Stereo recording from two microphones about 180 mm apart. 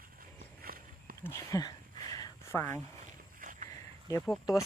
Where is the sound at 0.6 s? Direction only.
55° right (ahead or behind).